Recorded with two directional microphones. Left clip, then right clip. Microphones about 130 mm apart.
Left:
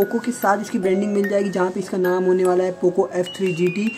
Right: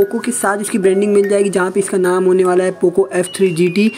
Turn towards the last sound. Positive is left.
turn(degrees=-30)  # may be behind; listen again after turning